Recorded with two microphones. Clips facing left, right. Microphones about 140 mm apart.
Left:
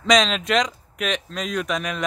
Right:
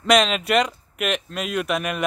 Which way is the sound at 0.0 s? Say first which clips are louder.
Right 1 dB; 5° right (ahead or behind).